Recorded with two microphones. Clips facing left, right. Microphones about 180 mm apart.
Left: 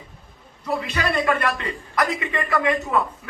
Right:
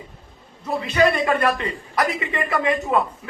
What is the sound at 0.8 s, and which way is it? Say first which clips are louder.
A man's voice: right 8 dB; 25° right (ahead or behind).